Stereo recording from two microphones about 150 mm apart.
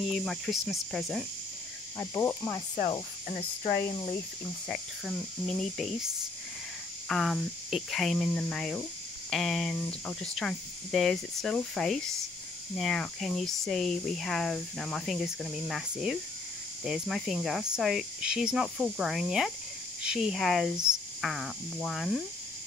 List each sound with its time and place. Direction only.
0.1 s speech: centre (ahead or behind)
2.0 s cricket: 15° left (ahead or behind)
2.9 s cricket: 35° left (ahead or behind)
4.6 s speech: centre (ahead or behind)
7.1 s speech: centre (ahead or behind)